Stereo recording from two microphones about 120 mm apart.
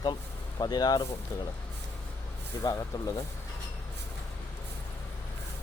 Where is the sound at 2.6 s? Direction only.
30° left (ahead or behind).